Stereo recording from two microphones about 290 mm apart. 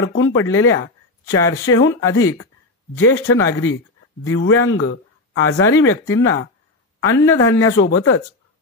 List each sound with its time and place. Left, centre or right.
0.0 s speech: left
1.2 s speech: centre
1.7 s speech: left
7.4 s speech: left